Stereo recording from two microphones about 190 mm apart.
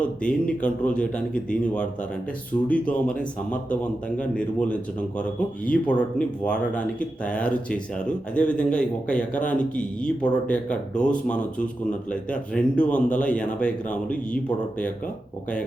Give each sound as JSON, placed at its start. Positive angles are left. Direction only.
{"t": 0.0, "sound": "speech", "side_deg": 5}